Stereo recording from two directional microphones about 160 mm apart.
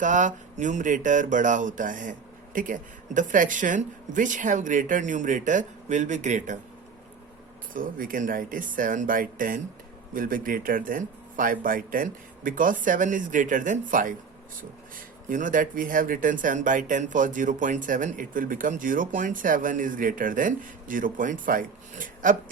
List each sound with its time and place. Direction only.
0.0 s speech: 50° right (ahead or behind)
7.7 s speech: 60° right (ahead or behind)